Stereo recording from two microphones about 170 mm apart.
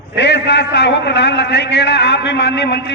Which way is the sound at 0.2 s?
90° left.